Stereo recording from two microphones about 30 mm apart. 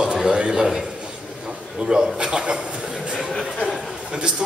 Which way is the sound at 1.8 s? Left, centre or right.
Right.